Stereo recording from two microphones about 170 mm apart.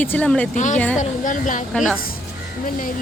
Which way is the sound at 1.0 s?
50° left (ahead or behind).